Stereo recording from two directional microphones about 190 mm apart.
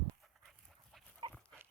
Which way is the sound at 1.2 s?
25° right (ahead or behind).